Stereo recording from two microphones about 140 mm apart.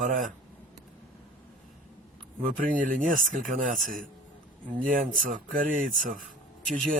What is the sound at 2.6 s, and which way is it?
Speech, 75° right (ahead or behind).